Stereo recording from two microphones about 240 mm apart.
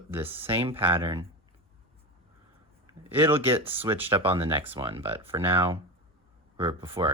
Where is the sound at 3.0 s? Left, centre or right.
Centre.